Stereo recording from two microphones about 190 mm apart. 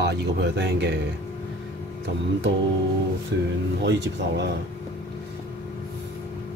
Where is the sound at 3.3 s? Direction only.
70° right (ahead or behind).